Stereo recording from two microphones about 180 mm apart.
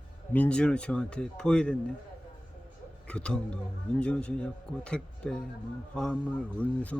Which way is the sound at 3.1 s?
5° left (ahead or behind).